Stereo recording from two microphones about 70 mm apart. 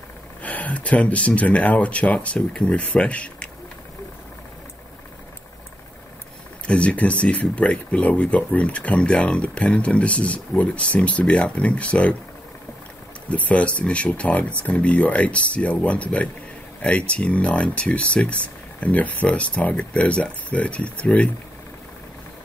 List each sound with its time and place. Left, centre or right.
0.4 s speech: left
6.7 s speech: centre
13.3 s speech: centre